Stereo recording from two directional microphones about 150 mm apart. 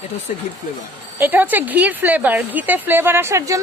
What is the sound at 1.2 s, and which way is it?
A woman's voice, 10° right (ahead or behind).